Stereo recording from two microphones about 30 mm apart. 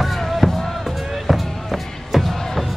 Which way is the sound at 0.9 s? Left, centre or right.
Centre.